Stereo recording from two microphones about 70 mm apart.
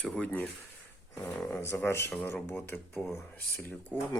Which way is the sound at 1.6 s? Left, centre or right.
Left.